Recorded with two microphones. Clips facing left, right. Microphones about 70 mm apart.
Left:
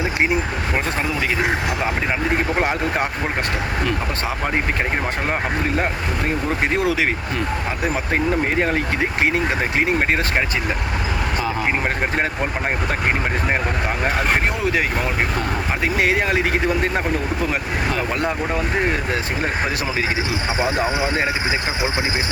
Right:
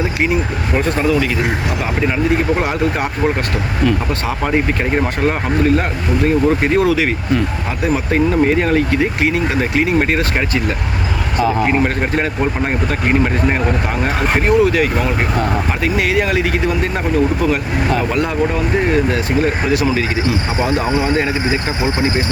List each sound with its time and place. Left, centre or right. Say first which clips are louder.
6.7 s speech: right 5 dB; centre
8.1 s speech: right 6 dB; centre
14.2 s speech: right 7 dB; centre